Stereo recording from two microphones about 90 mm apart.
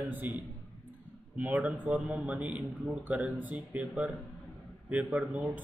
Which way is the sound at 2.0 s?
5° right (ahead or behind).